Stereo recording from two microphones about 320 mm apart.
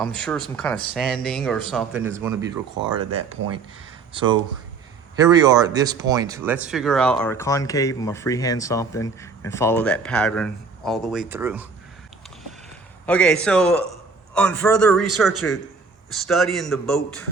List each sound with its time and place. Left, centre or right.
0.0 s speech: centre
13.1 s speech: centre